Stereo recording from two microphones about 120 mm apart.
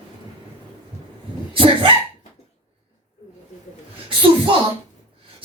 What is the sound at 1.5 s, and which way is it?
Dog, 50° right (ahead or behind).